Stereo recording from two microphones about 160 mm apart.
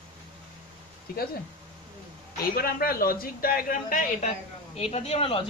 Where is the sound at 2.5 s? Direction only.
70° left (ahead or behind).